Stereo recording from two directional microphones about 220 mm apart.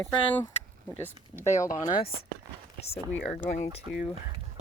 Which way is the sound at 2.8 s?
30° left (ahead or behind).